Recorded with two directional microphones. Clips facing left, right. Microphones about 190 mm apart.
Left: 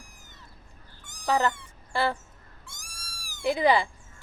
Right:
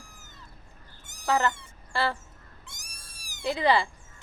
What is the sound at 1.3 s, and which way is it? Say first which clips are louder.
Speech: left 1 dB; 10° left (ahead or behind).